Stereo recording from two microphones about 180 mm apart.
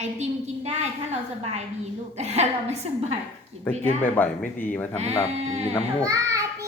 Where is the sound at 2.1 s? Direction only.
40° right (ahead or behind).